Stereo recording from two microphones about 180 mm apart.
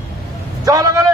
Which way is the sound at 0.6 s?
20° right (ahead or behind).